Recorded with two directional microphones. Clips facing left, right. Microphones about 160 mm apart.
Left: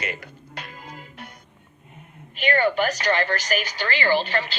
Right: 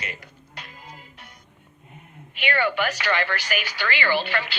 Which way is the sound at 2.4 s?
40° left (ahead or behind).